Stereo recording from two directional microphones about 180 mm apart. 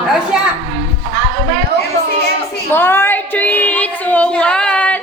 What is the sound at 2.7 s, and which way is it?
A woman's voice, 10° left (ahead or behind).